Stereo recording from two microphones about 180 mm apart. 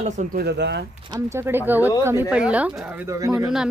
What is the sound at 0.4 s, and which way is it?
Speech, 65° right (ahead or behind).